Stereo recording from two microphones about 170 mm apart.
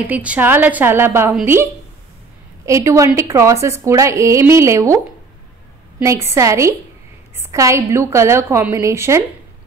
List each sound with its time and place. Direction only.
0.0 s a woman's voice: 10° right (ahead or behind)
5.9 s a woman's voice: 15° right (ahead or behind)